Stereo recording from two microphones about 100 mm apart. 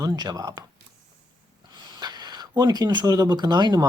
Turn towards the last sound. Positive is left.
turn(degrees=-45)  # may be behind; listen again after turning